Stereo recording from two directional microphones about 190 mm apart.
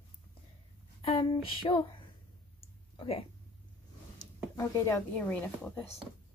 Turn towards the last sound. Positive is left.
turn(degrees=10)  # may be behind; listen again after turning